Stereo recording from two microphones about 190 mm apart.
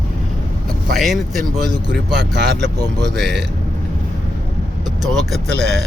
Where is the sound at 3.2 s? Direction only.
Centre (ahead or behind).